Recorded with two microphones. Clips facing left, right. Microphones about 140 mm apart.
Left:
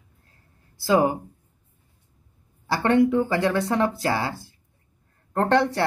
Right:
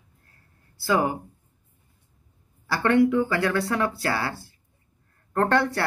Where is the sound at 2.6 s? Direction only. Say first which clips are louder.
Left 1 dB; 25° left (ahead or behind).